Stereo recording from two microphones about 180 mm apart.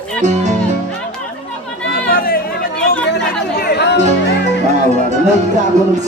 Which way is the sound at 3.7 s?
70° left (ahead or behind).